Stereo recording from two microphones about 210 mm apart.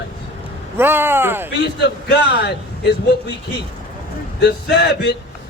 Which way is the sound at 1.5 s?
55° left (ahead or behind).